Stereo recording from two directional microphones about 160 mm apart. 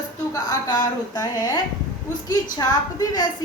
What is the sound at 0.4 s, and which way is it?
A woman's voice, 25° left (ahead or behind).